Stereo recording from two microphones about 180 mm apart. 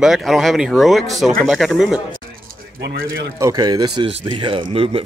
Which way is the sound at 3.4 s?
20° right (ahead or behind).